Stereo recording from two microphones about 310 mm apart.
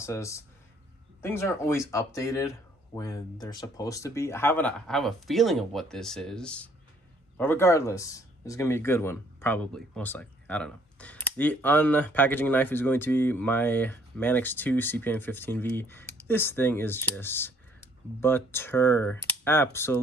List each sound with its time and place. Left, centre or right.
0.0 s speech: centre